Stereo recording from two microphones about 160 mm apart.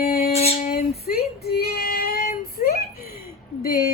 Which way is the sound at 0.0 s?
65° left (ahead or behind).